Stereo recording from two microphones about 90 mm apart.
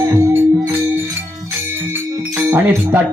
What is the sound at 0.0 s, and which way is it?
Music, 30° right (ahead or behind).